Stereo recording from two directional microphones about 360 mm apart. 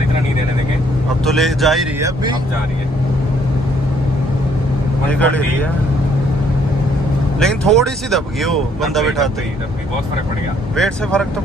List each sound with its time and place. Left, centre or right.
1.2 s speech: centre
5.1 s speech: centre
7.3 s speech: centre
10.8 s speech: centre